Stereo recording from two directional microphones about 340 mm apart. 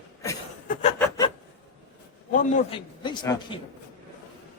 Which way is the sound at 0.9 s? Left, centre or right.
Centre.